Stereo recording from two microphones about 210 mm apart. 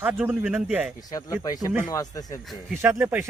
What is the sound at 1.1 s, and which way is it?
Speech, 15° left (ahead or behind).